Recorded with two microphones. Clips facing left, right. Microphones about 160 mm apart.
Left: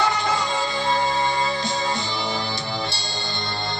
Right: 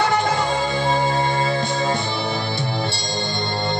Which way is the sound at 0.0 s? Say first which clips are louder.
Right 3 dB; 60° right (ahead or behind).